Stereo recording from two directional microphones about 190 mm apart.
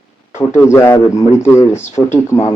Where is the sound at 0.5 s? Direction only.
15° left (ahead or behind).